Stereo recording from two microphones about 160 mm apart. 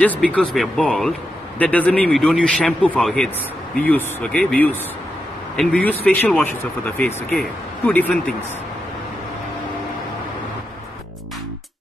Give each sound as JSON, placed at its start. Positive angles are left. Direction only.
{"t": 0.0, "sound": "speech", "side_deg": 10}